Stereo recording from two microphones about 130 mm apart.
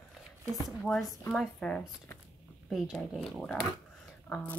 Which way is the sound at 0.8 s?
Centre (ahead or behind).